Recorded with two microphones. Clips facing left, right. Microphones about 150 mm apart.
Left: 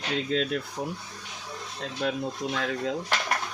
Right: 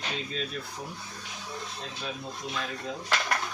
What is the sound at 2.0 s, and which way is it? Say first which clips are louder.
Speech: left 10 dB; 85° left.